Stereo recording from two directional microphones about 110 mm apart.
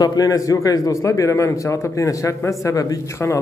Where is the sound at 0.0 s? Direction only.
30° left (ahead or behind).